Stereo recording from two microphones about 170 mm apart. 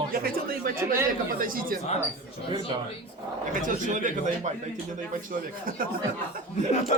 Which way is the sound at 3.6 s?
50° right (ahead or behind).